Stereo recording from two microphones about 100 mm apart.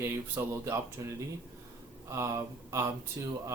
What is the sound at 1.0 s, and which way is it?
Speech, 40° right (ahead or behind).